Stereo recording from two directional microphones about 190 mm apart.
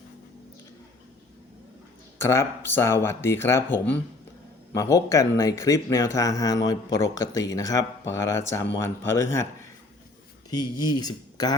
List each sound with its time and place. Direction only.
2.1 s speech: 15° left (ahead or behind)
10.5 s speech: 20° left (ahead or behind)